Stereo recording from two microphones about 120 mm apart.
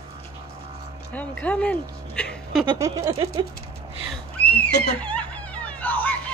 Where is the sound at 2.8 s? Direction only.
25° right (ahead or behind).